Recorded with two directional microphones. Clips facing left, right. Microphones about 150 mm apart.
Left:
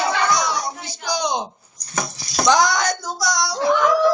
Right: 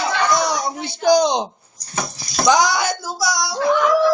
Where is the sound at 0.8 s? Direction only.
50° right (ahead or behind).